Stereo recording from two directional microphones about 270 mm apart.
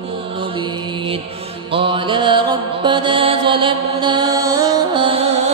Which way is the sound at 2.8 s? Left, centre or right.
Centre.